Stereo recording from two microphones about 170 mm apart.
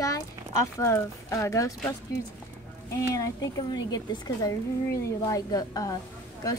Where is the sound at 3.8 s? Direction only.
20° left (ahead or behind).